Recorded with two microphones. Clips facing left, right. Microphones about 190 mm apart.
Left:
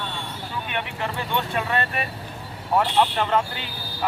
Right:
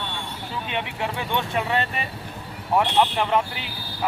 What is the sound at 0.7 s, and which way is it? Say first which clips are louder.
Speech: right 2 dB; 20° right (ahead or behind).